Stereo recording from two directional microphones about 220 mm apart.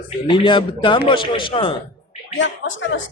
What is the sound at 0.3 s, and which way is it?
A man's voice, 20° left (ahead or behind).